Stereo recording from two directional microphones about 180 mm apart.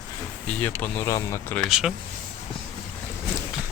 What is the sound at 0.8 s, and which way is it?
Speech, 10° left (ahead or behind).